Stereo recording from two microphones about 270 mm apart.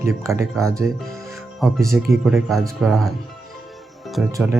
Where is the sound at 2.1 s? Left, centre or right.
Centre.